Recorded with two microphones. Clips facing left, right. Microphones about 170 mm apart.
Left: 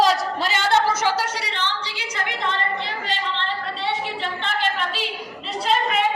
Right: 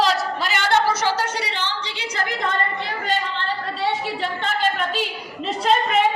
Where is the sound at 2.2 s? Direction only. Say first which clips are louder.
Right 1 dB; 45° right (ahead or behind).